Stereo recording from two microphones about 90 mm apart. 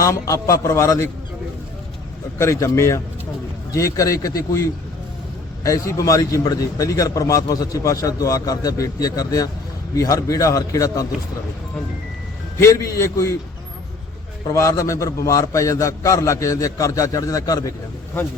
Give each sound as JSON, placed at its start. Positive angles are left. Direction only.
{"t": 0.0, "sound": "a man's voice", "side_deg": 40}
{"t": 2.4, "sound": "a man's voice", "side_deg": 35}
{"t": 5.6, "sound": "a man's voice", "side_deg": 40}
{"t": 12.5, "sound": "a man's voice", "side_deg": 35}
{"t": 14.5, "sound": "a man's voice", "side_deg": 35}